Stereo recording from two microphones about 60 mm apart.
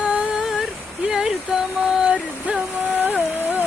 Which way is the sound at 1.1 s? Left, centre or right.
Centre.